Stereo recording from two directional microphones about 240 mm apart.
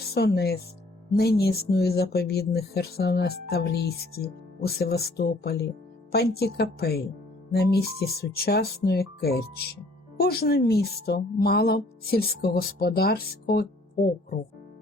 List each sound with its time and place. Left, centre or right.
0.1 s speech: left